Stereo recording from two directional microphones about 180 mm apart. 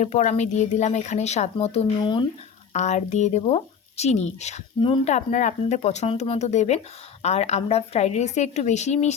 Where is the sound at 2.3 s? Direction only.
40° left (ahead or behind).